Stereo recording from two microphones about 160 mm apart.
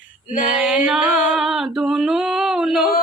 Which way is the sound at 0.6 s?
5° right (ahead or behind).